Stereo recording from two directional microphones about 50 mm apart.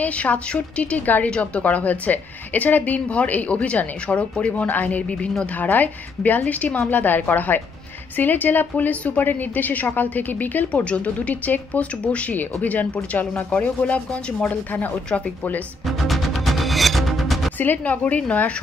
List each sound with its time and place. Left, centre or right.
0.0 s a woman's voice: left
16.0 s music: centre
17.6 s a woman's voice: left